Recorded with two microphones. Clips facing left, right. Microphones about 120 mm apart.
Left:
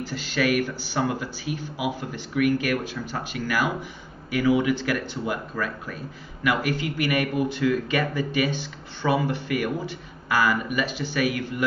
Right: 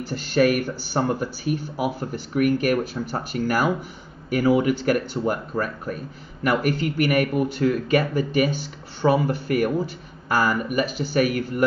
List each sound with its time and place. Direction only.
0.1 s speech: 45° right (ahead or behind)